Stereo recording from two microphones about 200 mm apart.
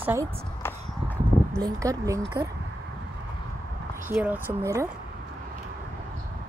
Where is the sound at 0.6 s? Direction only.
10° left (ahead or behind).